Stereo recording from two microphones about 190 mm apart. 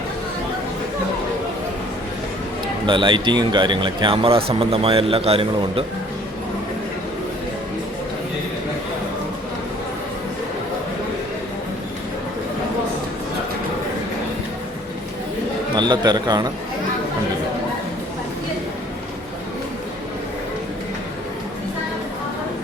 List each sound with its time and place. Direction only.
2.8 s speech: 25° right (ahead or behind)
15.7 s speech: 25° right (ahead or behind)